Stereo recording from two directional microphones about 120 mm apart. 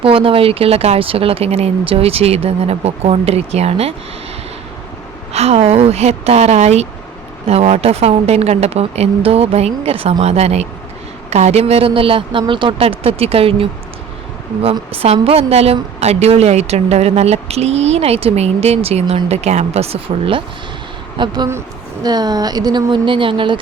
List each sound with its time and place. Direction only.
0.0 s a woman's voice: 50° right (ahead or behind)
5.3 s a woman's voice: 60° right (ahead or behind)
14.9 s a woman's voice: 60° right (ahead or behind)
21.2 s a woman's voice: 40° right (ahead or behind)